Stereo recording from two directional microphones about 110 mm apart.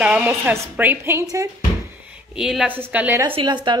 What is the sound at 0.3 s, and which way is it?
Speech, 25° right (ahead or behind).